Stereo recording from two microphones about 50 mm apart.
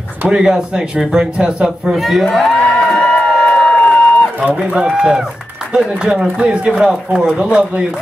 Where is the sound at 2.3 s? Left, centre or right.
Centre.